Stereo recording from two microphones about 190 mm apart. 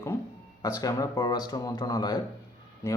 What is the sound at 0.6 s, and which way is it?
Speech, 20° left (ahead or behind).